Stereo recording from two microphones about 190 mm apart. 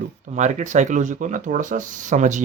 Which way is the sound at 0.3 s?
40° right (ahead or behind).